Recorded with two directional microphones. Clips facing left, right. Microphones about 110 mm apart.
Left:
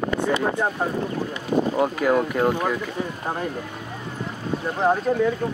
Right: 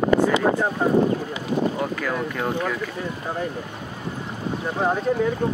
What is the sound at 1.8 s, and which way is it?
Speech, 20° left (ahead or behind).